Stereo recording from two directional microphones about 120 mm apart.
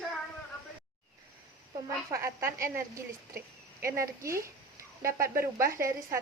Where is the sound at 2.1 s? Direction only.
25° right (ahead or behind).